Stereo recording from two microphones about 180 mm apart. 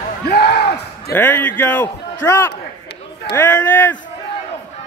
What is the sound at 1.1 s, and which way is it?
A man's voice, 10° left (ahead or behind).